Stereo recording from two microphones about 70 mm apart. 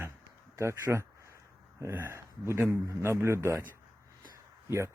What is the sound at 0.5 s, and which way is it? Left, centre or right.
A man's voice, right.